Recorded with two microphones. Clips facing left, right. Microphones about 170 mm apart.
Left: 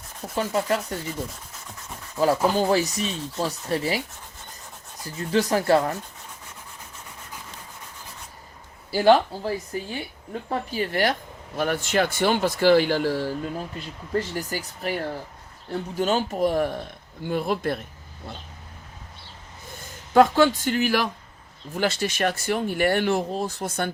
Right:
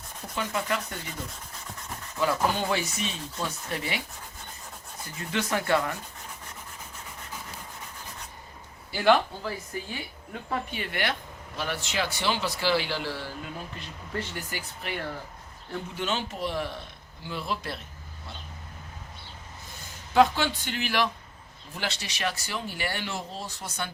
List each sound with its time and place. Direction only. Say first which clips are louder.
0.3 s rub: left 6 dB; 35° left (ahead or behind)
2.1 s rub: left 6 dB; 35° left (ahead or behind)
5.3 s rub: left 6 dB; 35° left (ahead or behind)
8.9 s rub: left 5 dB; 35° left (ahead or behind)
10.5 s speech: left 6 dB; 35° left (ahead or behind)
14.1 s rub: left 8 dB; 40° left (ahead or behind)
15.7 s speech: left 7 dB; 40° left (ahead or behind)
20.1 s speech: left 5 dB; 45° left (ahead or behind)